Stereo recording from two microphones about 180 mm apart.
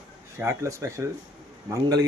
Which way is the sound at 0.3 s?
15° right (ahead or behind).